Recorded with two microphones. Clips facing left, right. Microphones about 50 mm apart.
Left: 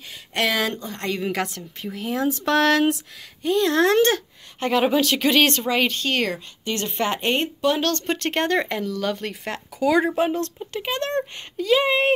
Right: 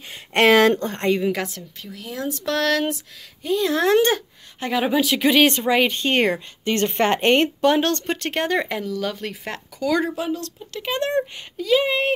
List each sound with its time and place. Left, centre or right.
0.1 s a sound: right
1.2 s speech: centre
1.8 s speech: left
2.2 s a sound: centre
3.4 s speech: centre
6.0 s a woman's voice: right
7.7 s speech: right
8.3 s speech: centre
9.8 s speech: centre
10.1 s speech: left
10.9 s speech: centre
11.5 s speech: centre